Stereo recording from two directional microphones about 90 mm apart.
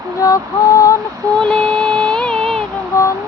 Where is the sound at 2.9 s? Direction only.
30° left (ahead or behind).